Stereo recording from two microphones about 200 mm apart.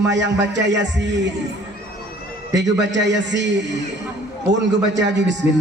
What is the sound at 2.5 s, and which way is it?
A man's voice, 60° right (ahead or behind).